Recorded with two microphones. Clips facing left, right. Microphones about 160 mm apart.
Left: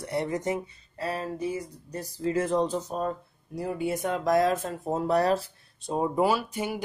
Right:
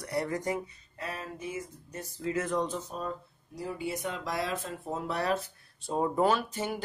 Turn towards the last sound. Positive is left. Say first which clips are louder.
# left 2 dB
turn(degrees=10)  # may be behind; listen again after turning